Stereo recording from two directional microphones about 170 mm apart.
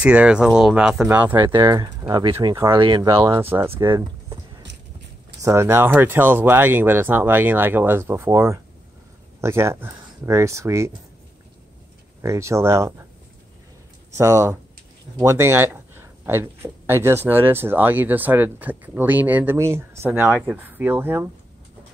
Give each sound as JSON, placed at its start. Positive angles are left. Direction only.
{"t": 0.0, "sound": "speech", "side_deg": -5}
{"t": 1.5, "sound": "speech", "side_deg": -20}
{"t": 2.7, "sound": "speech", "side_deg": -30}
{"t": 3.3, "sound": "speech", "side_deg": -15}
{"t": 5.4, "sound": "speech", "side_deg": -15}
{"t": 12.2, "sound": "speech", "side_deg": -15}
{"t": 14.1, "sound": "speech", "side_deg": -15}